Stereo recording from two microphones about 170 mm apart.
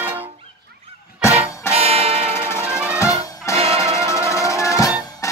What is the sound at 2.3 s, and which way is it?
Music, 15° left (ahead or behind).